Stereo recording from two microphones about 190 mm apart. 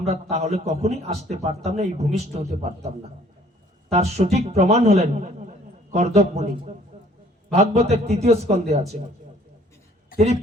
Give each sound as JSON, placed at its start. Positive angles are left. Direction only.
{"t": 0.1, "sound": "a man's voice", "side_deg": -35}
{"t": 3.9, "sound": "a man's voice", "side_deg": -35}